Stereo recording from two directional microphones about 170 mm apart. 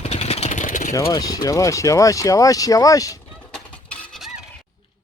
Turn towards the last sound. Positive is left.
turn(degrees=0)  # may be behind; listen again after turning